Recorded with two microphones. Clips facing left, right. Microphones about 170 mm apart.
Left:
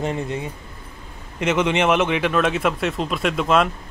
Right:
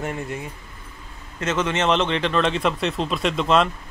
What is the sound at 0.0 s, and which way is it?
Speech, 20° left (ahead or behind).